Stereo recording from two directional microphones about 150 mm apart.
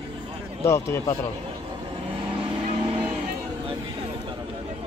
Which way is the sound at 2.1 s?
35° right (ahead or behind).